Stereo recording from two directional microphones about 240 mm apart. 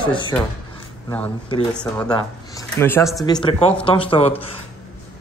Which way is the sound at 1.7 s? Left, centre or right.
Centre.